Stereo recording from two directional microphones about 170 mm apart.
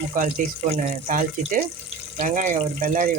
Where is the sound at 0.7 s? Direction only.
50° right (ahead or behind).